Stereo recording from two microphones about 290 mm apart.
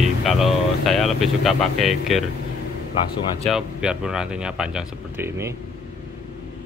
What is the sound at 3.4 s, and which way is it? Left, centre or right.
Speech, centre.